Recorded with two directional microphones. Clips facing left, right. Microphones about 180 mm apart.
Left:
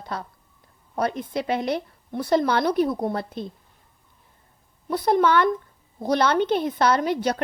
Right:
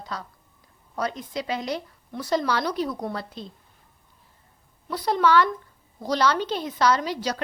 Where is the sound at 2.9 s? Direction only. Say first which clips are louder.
Left 5 dB; 25° left (ahead or behind).